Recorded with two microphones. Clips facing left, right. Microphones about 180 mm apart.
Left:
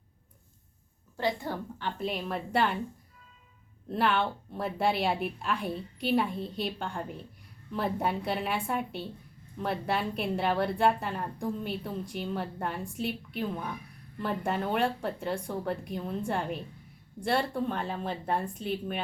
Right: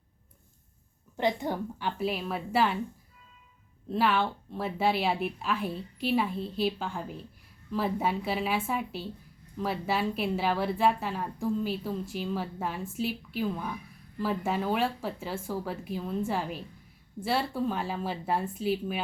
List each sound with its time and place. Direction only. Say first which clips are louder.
1.1 s a woman's voice: right 3 dB; 20° right (ahead or behind)
2.0 s a woman's voice: right 1 dB; 5° right (ahead or behind)
3.9 s a woman's voice: right 1 dB; centre (ahead or behind)